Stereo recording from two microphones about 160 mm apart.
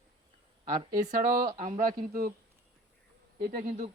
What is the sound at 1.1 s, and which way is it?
A man's voice, 50° right (ahead or behind).